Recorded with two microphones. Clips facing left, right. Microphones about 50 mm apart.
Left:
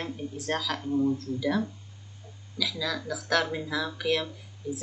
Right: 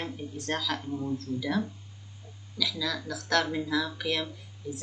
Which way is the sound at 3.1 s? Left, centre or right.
Centre.